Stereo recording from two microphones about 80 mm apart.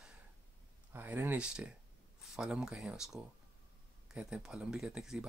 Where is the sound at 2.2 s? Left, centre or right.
Centre.